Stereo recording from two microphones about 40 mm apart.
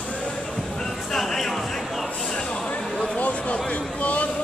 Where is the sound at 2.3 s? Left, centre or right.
Left.